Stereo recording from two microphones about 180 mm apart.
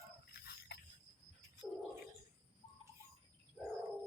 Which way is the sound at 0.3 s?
60° left (ahead or behind).